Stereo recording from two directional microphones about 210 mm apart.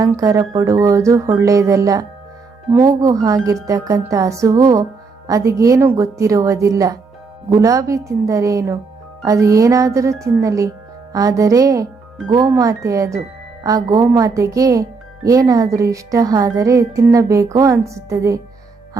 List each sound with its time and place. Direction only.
0.0 s speech: 15° right (ahead or behind)